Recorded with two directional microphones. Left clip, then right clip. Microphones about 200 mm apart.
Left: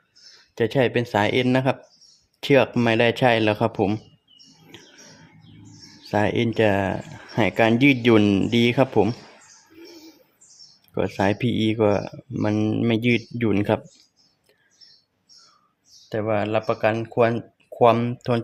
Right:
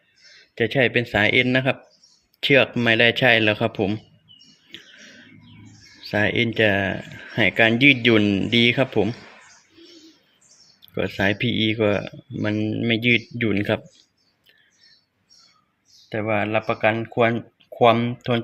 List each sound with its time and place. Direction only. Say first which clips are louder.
0.5 s speech: right 1 dB; 5° left (ahead or behind)
6.0 s speech: right 1 dB; 5° left (ahead or behind)
10.9 s speech: even; 5° left (ahead or behind)
16.0 s speech: even; centre (ahead or behind)